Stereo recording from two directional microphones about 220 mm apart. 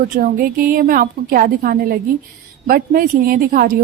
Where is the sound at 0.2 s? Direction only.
40° right (ahead or behind).